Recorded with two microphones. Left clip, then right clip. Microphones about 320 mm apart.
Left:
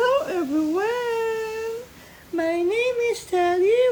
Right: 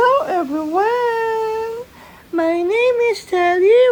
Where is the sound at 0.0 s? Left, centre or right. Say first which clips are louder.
Right 6 dB; centre.